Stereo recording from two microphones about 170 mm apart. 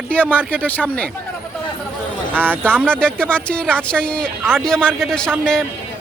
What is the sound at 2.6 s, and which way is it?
Speech, 5° left (ahead or behind).